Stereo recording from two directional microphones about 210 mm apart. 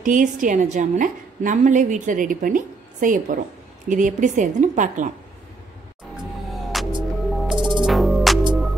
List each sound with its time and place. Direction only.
0.0 s a woman's voice: 40° right (ahead or behind)
6.5 s music: centre (ahead or behind)
6.9 s music: 20° right (ahead or behind)
7.8 s music: centre (ahead or behind)